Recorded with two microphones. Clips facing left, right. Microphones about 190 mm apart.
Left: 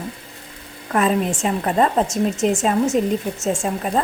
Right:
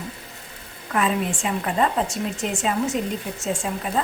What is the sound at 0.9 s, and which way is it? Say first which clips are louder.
A woman's voice: left 4 dB; 40° left (ahead or behind).